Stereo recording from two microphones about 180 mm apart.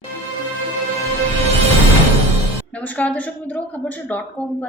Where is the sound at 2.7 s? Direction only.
10° left (ahead or behind).